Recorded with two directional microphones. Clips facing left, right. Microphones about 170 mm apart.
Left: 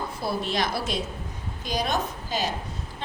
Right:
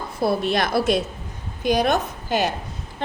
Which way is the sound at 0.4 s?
60° right (ahead or behind).